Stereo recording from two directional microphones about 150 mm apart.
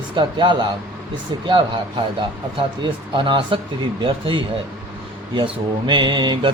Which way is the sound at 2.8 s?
30° right (ahead or behind).